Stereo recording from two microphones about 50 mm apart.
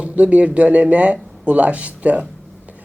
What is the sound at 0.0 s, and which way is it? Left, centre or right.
Speech, right.